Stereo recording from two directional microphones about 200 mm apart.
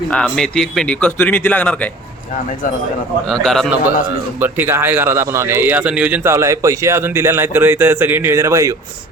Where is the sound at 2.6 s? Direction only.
40° left (ahead or behind).